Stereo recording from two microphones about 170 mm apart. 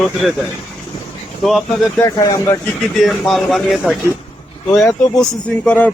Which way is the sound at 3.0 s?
Centre (ahead or behind).